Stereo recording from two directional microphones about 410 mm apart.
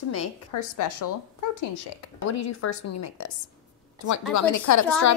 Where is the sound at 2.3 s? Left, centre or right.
Left.